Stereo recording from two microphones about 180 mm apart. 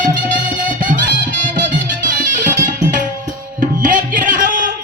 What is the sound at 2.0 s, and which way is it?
Music, 50° right (ahead or behind).